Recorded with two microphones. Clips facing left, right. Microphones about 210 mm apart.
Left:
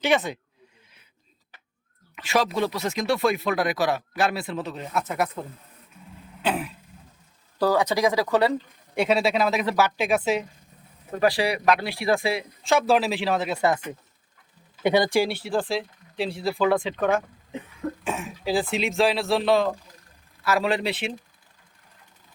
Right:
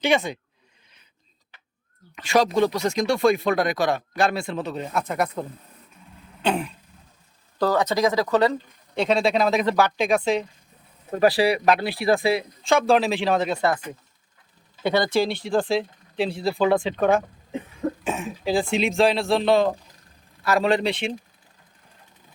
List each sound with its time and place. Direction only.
0.0 s speech: 5° left (ahead or behind)
2.1 s speech: 5° left (ahead or behind)
6.4 s speech: 5° left (ahead or behind)
11.2 s speech: 35° right (ahead or behind)
12.6 s speech: 5° left (ahead or behind)
14.8 s speech: 15° left (ahead or behind)
16.5 s speech: 25° right (ahead or behind)
18.0 s speech: centre (ahead or behind)